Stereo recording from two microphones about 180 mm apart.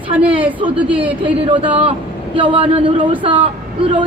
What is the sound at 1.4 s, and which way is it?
Speech, 30° right (ahead or behind).